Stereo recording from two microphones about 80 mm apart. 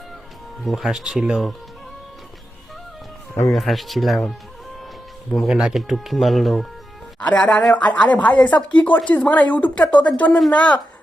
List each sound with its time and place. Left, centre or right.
0.6 s speech: centre
3.5 s speech: centre
5.5 s speech: centre
7.2 s speech: centre